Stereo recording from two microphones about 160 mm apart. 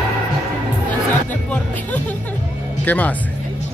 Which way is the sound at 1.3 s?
10° left (ahead or behind).